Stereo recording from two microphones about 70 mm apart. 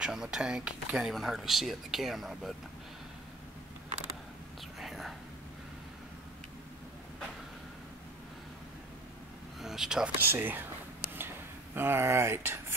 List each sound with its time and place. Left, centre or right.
0.0 s speech: centre
4.7 s whispering: centre
9.6 s speech: centre
10.1 s speech: right
11.1 s a sound: right